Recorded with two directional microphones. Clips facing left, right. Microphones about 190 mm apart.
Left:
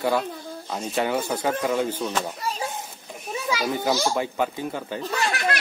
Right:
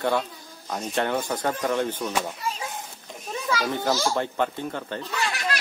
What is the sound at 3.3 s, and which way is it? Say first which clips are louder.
A child's voice: left 1 dB; 10° left (ahead or behind).